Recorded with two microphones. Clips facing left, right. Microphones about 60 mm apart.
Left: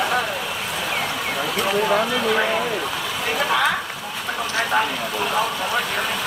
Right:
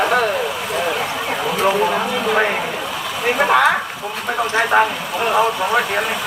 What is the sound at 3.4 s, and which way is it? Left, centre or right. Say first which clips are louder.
Speech: right 6 dB; right.